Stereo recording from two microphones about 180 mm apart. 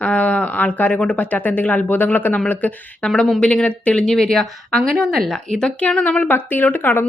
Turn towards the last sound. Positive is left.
turn(degrees=10)  # may be behind; listen again after turning